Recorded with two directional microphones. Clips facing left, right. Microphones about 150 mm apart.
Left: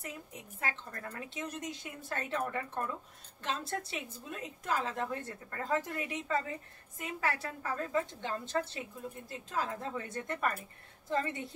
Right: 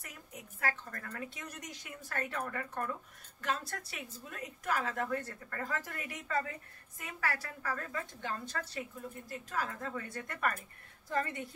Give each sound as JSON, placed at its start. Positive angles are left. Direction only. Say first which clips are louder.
{"t": 0.0, "sound": "a woman's voice", "louder": "left 5 dB", "side_deg": 25}